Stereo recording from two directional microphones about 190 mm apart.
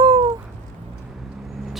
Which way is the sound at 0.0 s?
25° right (ahead or behind).